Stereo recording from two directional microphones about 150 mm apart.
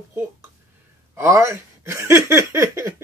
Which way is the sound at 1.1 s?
20° right (ahead or behind).